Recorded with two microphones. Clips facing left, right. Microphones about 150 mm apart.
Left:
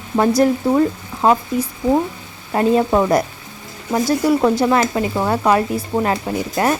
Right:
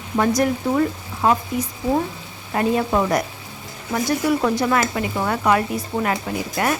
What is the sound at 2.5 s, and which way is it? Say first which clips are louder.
Speech: left 4 dB; 30° left (ahead or behind).